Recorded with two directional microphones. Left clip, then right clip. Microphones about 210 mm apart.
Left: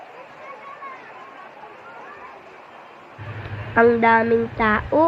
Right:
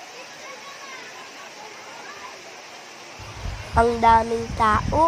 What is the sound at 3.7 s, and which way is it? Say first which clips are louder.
Speech: left 1 dB; 10° right (ahead or behind).